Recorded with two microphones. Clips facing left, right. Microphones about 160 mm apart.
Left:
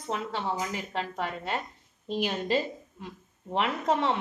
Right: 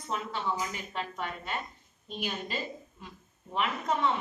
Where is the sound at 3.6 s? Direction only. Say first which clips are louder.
Left 3 dB; 75° left (ahead or behind).